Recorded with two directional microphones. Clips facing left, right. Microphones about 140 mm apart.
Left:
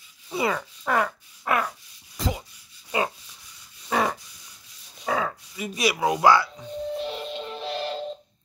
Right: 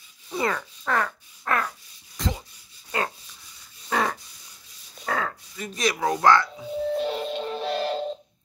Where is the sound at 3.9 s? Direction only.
5° left (ahead or behind).